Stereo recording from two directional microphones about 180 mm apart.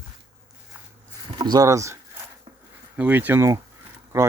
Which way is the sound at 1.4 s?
20° right (ahead or behind).